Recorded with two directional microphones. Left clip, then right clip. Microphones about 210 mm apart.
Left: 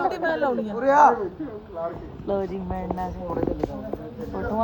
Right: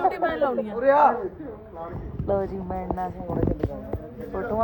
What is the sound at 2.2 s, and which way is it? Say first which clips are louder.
Speech: right 1 dB; 15° right (ahead or behind).